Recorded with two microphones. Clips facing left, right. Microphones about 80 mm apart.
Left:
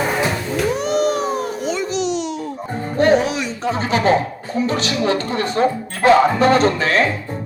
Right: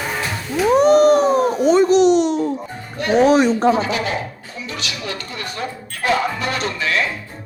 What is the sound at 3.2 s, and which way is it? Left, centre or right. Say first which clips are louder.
Speech: right 8 dB; right.